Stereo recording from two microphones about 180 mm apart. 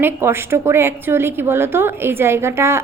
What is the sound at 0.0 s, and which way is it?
A woman's voice, 15° right (ahead or behind).